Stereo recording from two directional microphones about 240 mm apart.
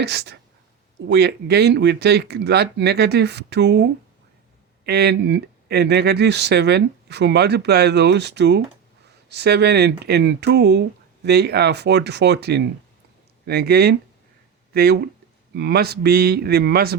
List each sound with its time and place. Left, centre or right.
0.0 s speech: right
4.9 s speech: right